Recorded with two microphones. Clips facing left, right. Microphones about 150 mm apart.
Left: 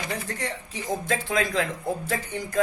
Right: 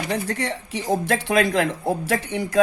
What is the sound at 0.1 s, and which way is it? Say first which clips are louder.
Speech: right 6 dB; 70° right (ahead or behind).